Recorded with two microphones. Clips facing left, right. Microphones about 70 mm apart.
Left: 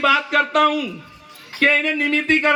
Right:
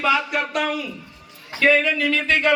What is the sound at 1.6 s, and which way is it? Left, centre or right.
Speech, left.